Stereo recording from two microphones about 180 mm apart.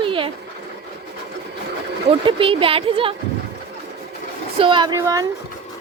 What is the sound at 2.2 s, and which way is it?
Speech, 30° right (ahead or behind).